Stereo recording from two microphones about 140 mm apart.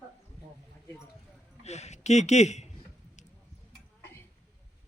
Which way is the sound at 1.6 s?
50° left (ahead or behind).